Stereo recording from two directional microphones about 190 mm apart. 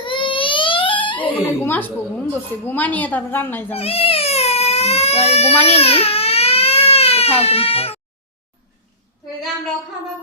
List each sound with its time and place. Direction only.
0.0 s baby cry: 25° left (ahead or behind)
1.2 s a sound: 10° left (ahead or behind)
2.3 s a woman's voice: 10° left (ahead or behind)
3.7 s baby cry: 30° left (ahead or behind)